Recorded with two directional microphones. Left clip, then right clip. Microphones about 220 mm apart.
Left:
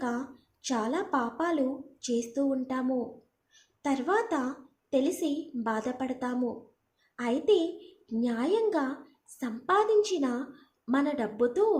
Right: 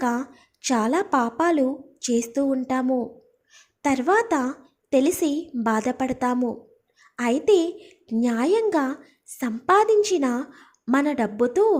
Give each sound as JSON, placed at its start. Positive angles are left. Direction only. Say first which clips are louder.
{"t": 0.0, "sound": "a woman's voice", "louder": "right 8 dB", "side_deg": -40}